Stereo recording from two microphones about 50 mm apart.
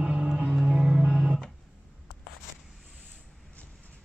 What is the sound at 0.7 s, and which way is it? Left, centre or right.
Music, centre.